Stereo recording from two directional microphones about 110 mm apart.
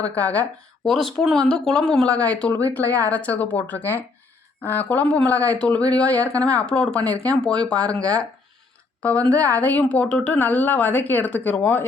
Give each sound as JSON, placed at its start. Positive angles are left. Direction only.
{"t": 0.2, "sound": "a woman's voice", "side_deg": 15}
{"t": 0.9, "sound": "a woman's voice", "side_deg": 0}